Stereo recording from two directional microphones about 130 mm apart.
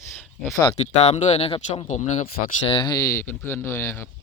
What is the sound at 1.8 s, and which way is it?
Speech, 65° left (ahead or behind).